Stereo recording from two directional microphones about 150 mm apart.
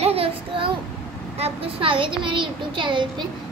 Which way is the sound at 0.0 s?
40° right (ahead or behind).